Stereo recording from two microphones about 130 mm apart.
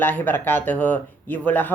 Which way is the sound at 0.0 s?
15° left (ahead or behind).